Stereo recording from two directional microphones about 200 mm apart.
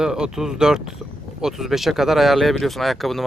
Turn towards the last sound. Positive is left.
turn(degrees=0)  # may be behind; listen again after turning